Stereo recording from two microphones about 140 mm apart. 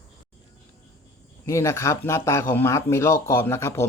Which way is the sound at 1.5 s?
20° left (ahead or behind).